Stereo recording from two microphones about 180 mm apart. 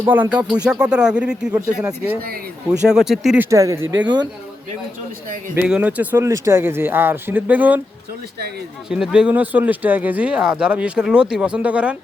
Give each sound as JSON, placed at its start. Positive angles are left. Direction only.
{"t": 0.0, "sound": "speech", "side_deg": -10}
{"t": 2.9, "sound": "speech", "side_deg": 0}
{"t": 3.5, "sound": "speech", "side_deg": -15}
{"t": 5.5, "sound": "speech", "side_deg": -5}
{"t": 8.9, "sound": "speech", "side_deg": -5}